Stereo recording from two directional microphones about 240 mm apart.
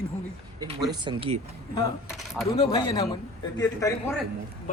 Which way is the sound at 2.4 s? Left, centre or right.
Centre.